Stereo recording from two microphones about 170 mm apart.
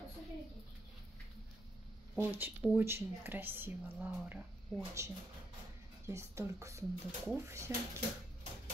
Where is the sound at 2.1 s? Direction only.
10° right (ahead or behind).